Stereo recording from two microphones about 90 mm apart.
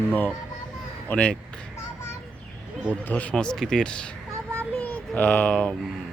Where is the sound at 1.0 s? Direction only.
15° left (ahead or behind).